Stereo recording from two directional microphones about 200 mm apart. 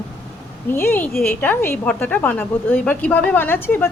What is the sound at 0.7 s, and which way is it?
A woman's voice, 10° left (ahead or behind).